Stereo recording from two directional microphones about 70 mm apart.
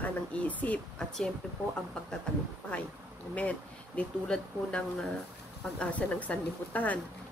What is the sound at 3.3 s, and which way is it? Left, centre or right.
Speech, left.